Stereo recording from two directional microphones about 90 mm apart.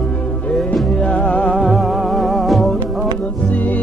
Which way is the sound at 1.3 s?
15° left (ahead or behind).